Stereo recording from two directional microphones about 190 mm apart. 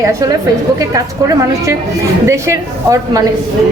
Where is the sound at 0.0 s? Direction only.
15° right (ahead or behind).